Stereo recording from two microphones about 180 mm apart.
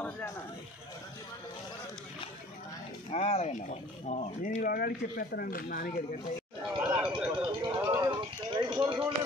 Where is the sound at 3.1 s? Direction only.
35° left (ahead or behind); by 5.9 s 55° left (ahead or behind).